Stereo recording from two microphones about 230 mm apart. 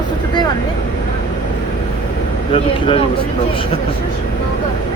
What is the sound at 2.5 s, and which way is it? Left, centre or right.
Speech, left.